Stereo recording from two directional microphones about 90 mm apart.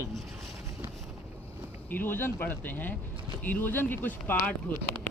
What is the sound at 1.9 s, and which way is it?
Speech, 20° left (ahead or behind).